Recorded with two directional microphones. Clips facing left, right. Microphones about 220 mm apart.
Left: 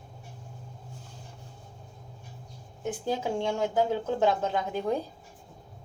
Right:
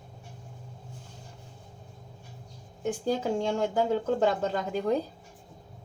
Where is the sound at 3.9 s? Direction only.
50° right (ahead or behind).